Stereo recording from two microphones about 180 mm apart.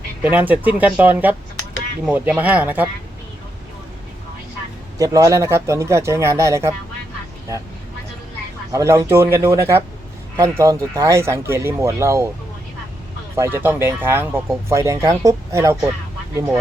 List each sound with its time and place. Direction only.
0.2 s speech: 10° right (ahead or behind)
4.9 s speech: 20° right (ahead or behind)
8.7 s speech: 15° right (ahead or behind)
13.3 s speech: 15° right (ahead or behind)